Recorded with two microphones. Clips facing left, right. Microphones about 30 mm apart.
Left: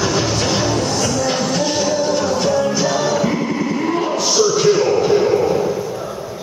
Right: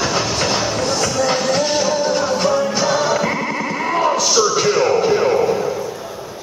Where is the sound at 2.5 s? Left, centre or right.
Centre.